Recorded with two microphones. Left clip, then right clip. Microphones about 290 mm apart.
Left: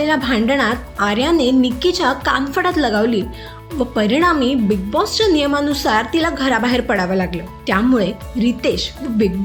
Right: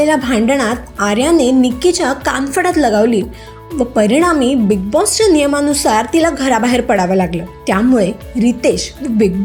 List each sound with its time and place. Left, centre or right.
0.0 s a woman's voice: centre